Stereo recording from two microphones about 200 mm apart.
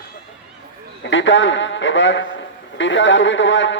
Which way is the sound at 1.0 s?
70° left (ahead or behind).